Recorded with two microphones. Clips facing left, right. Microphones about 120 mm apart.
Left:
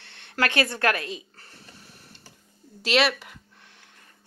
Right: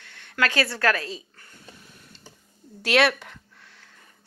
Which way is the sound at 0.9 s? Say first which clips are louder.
Right 1 dB; 35° right (ahead or behind).